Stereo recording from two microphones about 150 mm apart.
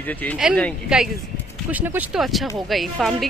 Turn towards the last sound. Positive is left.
turn(degrees=0)  # may be behind; listen again after turning